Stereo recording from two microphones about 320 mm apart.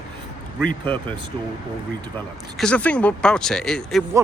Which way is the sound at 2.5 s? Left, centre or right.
Centre.